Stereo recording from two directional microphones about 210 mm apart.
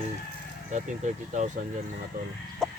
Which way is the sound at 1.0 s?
35° right (ahead or behind).